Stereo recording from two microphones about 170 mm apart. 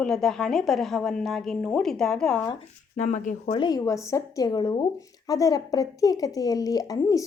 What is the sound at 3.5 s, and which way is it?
A woman's voice, 25° left (ahead or behind).